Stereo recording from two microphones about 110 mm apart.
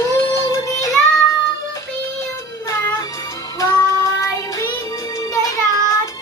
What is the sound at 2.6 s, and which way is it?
Music, 30° left (ahead or behind).